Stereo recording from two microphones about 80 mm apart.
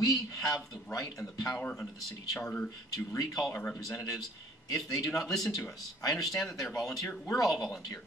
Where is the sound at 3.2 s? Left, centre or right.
Left.